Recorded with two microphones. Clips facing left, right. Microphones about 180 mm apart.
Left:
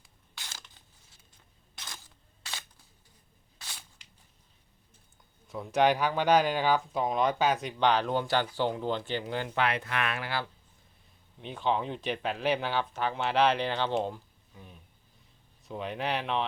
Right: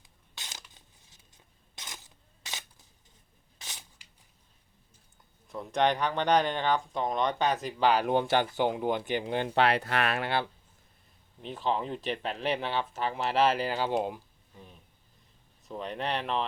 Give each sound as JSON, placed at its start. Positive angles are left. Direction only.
{"t": 0.3, "sound": "a sound", "side_deg": -20}
{"t": 1.8, "sound": "scissors", "side_deg": -20}
{"t": 3.6, "sound": "a sound", "side_deg": -20}
{"t": 5.5, "sound": "speech", "side_deg": 5}
{"t": 8.0, "sound": "speech", "side_deg": -20}
{"t": 9.6, "sound": "speech", "side_deg": -35}
{"t": 11.3, "sound": "speech", "side_deg": 0}
{"t": 14.5, "sound": "speech", "side_deg": 0}